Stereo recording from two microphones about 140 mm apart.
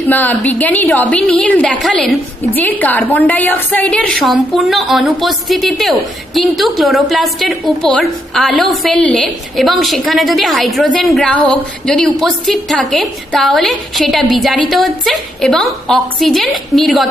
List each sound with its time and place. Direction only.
0.0 s a woman's voice: 10° left (ahead or behind)
2.5 s a woman's voice: 10° left (ahead or behind)